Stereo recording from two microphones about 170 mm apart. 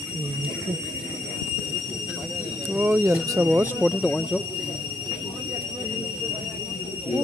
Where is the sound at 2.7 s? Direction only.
10° right (ahead or behind).